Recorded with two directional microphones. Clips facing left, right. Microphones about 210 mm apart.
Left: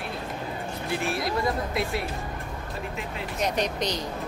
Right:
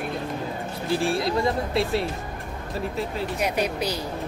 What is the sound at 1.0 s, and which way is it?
Speech, 30° right (ahead or behind).